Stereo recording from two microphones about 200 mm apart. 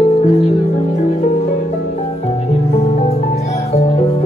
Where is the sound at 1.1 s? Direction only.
35° left (ahead or behind).